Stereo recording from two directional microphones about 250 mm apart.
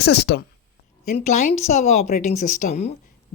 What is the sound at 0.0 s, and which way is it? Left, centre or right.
A woman's voice, left.